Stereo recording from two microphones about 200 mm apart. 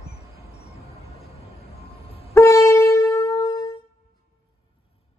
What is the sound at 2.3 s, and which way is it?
Wind instrument, 15° left (ahead or behind).